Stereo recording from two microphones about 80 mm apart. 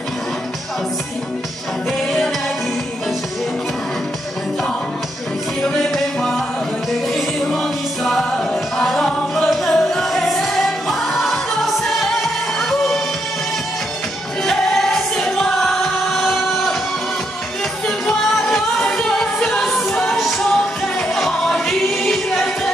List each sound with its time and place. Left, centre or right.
1.9 s music: centre
7.2 s music: centre
14.4 s music: centre
17.8 s music: centre